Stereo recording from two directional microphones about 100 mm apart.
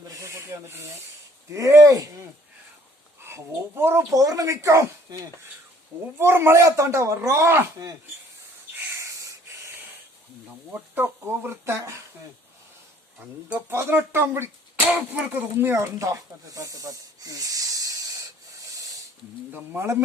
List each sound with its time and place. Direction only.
0.1 s a sound: 30° right (ahead or behind)
1.5 s speech: 35° right (ahead or behind)
3.2 s speech: 25° right (ahead or behind)
4.1 s speech: 35° right (ahead or behind)
6.1 s speech: 25° right (ahead or behind)
10.7 s speech: 20° right (ahead or behind)
13.1 s speech: 15° right (ahead or behind); by 18.2 s 35° right (ahead or behind)
18.6 s a sound: 35° right (ahead or behind)
19.5 s speech: 25° right (ahead or behind)